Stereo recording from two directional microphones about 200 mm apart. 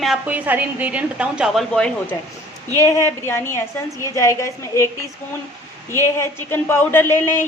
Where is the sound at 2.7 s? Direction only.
15° left (ahead or behind).